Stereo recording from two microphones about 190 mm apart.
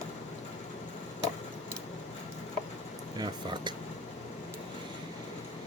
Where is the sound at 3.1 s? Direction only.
25° right (ahead or behind).